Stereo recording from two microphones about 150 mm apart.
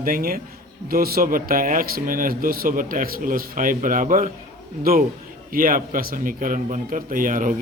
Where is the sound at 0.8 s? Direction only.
85° right.